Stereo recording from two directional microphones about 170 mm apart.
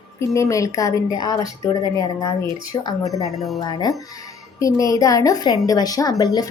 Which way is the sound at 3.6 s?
25° left (ahead or behind).